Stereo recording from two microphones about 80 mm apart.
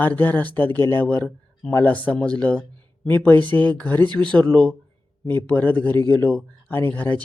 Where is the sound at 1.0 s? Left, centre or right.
Centre.